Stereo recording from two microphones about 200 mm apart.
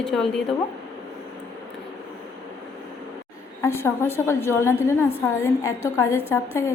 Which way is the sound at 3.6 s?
10° left (ahead or behind).